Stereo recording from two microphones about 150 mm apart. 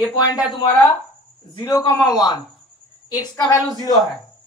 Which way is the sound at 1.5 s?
25° left (ahead or behind).